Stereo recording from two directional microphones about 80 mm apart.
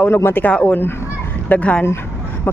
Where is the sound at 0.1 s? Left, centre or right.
Left.